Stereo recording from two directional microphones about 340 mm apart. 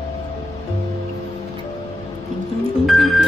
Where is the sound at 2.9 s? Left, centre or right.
Centre.